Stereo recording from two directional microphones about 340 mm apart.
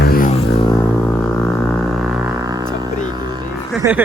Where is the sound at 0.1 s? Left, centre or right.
Left.